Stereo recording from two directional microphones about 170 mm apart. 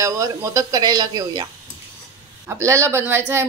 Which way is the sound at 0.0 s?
20° right (ahead or behind).